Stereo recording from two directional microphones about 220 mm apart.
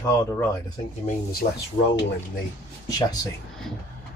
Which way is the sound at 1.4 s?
45° left (ahead or behind).